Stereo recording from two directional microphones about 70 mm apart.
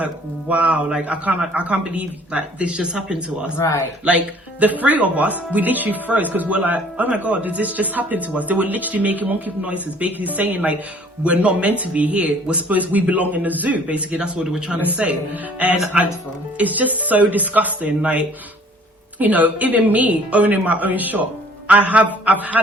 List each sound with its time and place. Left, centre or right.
0.0 s speech: right
3.6 s a man's voice: left
4.6 s speech: right
14.8 s speech: right
16.6 s speech: right
19.2 s speech: right